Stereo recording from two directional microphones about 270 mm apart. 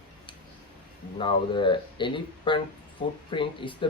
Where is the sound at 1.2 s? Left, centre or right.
Centre.